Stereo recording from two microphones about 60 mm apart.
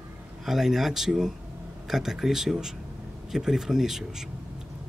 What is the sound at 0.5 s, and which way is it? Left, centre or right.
Speech, centre.